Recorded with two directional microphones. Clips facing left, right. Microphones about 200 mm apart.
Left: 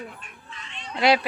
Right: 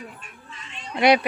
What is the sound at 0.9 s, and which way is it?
Speech, 20° right (ahead or behind).